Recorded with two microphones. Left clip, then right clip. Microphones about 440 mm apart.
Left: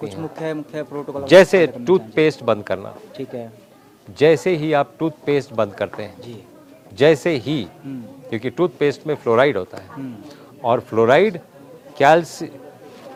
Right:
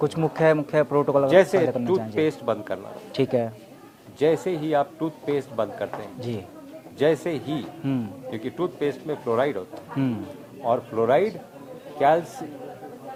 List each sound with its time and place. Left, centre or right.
0.0 s speech: right
1.3 s a man's voice: left
3.2 s speech: right
4.2 s a man's voice: left
10.7 s speech: left